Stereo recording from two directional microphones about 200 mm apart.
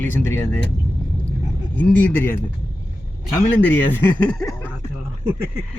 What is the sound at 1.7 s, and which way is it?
Speech, 10° left (ahead or behind).